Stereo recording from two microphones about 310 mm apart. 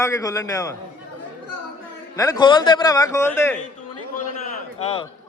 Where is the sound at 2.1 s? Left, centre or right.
Centre.